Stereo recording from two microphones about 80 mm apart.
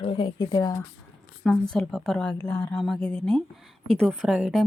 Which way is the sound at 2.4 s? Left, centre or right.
Left.